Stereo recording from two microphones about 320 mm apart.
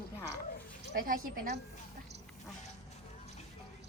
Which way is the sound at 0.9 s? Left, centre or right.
Right.